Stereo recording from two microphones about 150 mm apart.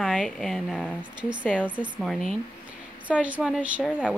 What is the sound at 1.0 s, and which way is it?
Speech, 30° right (ahead or behind).